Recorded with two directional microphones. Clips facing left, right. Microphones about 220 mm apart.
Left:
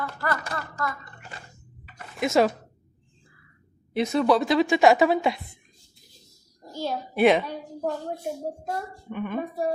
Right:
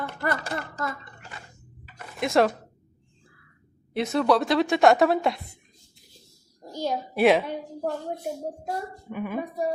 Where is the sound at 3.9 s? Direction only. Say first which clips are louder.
Left 1 dB; centre (ahead or behind).